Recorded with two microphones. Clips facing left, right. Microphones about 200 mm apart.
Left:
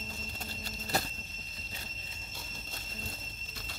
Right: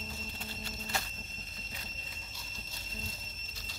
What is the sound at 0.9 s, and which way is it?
Squeal, 35° left (ahead or behind).